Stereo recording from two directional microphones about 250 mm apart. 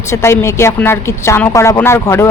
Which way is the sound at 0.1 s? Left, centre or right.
Centre.